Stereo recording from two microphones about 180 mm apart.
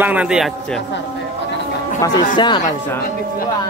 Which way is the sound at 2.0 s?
25° left (ahead or behind).